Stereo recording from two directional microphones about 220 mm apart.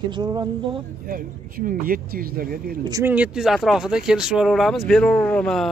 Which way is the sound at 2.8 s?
15° right (ahead or behind).